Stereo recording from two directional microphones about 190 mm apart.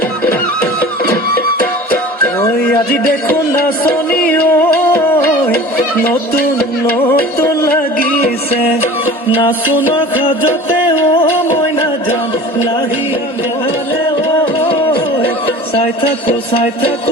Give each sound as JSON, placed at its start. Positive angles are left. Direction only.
{"t": 4.3, "sound": "music", "side_deg": 10}
{"t": 7.1, "sound": "music", "side_deg": 55}
{"t": 9.9, "sound": "music", "side_deg": 25}
{"t": 14.4, "sound": "music", "side_deg": 30}
{"t": 15.2, "sound": "a sound", "side_deg": 30}